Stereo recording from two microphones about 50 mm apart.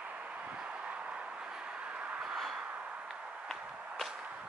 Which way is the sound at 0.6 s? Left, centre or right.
Right.